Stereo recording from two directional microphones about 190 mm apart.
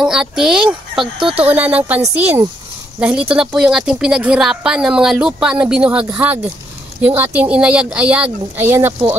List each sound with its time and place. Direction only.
0.0 s a child's voice: 5° right (ahead or behind)
1.2 s speech: 30° right (ahead or behind)
1.5 s a woman's voice: 10° right (ahead or behind)